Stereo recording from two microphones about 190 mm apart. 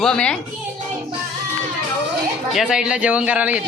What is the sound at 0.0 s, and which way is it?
Speech, 5° left (ahead or behind).